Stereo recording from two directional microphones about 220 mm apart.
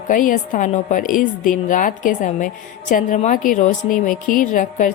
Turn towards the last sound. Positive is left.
turn(degrees=35)  # may be behind; listen again after turning